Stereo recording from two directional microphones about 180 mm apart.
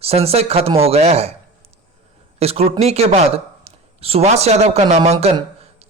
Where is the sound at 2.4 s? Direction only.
35° right (ahead or behind).